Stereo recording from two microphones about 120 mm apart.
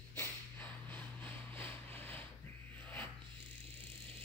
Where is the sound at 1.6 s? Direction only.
15° left (ahead or behind).